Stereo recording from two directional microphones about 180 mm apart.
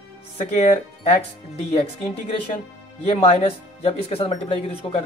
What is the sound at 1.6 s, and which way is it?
Speech, 35° left (ahead or behind).